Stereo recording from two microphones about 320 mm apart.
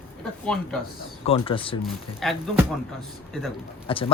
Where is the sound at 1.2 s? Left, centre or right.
Centre.